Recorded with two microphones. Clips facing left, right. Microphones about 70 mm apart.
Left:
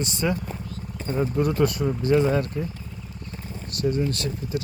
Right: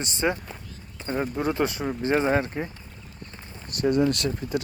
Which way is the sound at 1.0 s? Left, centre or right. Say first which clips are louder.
Left 2 dB; right.